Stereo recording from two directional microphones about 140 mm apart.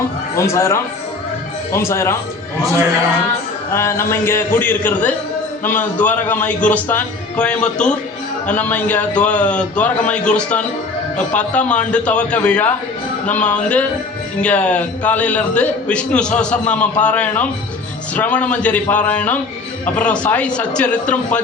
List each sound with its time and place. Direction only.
0.3 s speech: 20° left (ahead or behind)
3.7 s a man's voice: 20° left (ahead or behind)